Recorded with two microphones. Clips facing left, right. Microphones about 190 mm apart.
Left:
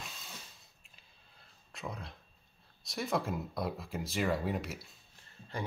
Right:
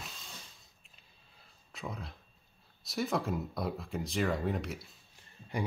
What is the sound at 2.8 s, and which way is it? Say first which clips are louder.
Speech: right 1 dB; centre (ahead or behind).